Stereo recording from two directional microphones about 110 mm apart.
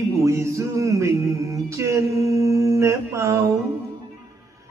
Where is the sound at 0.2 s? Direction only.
25° right (ahead or behind).